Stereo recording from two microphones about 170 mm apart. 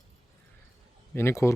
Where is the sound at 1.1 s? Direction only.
15° left (ahead or behind).